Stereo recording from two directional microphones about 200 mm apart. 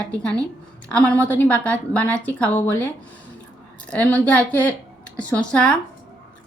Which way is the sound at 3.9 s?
5° left (ahead or behind).